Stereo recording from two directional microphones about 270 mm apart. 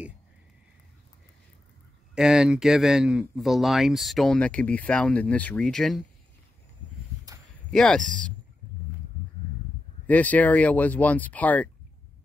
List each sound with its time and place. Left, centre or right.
2.1 s speech: centre
7.7 s speech: centre
10.0 s speech: centre